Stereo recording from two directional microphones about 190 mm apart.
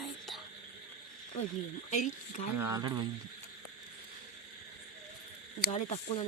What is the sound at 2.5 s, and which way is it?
Speech, 15° right (ahead or behind).